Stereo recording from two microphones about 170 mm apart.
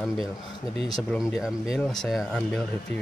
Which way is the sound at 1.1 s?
Centre (ahead or behind).